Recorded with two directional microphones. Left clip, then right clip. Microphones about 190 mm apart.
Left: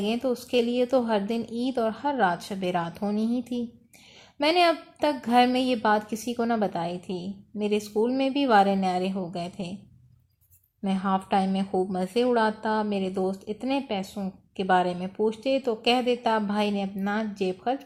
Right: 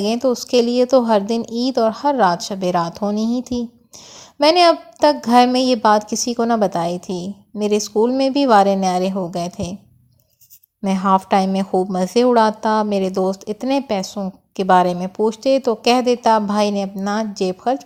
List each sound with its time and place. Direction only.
0.0 s speech: 35° right (ahead or behind)
10.8 s speech: 40° right (ahead or behind)